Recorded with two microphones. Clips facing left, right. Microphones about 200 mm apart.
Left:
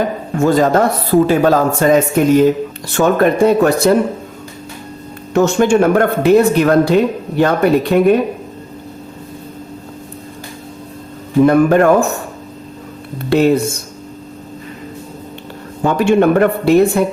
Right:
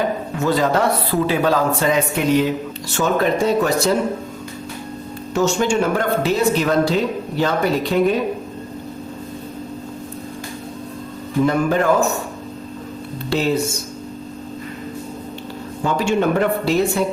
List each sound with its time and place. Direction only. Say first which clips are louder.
0.3 s speech: left 7 dB; 45° left (ahead or behind)
2.9 s speech: left 6 dB; 55° left (ahead or behind)
5.3 s speech: left 6 dB; 60° left (ahead or behind)
11.4 s speech: left 7 dB; 55° left (ahead or behind)
13.3 s speech: left 8 dB; 55° left (ahead or behind)
15.8 s speech: left 7 dB; 55° left (ahead or behind)